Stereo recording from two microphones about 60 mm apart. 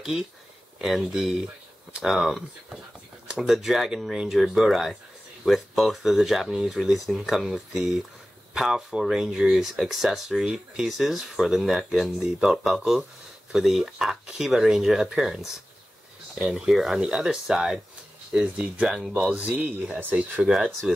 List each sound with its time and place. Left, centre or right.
0.7 s speech: centre
20.4 s speech: centre